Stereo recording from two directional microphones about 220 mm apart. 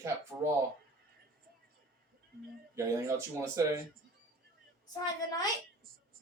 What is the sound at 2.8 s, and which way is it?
Speech, 15° right (ahead or behind).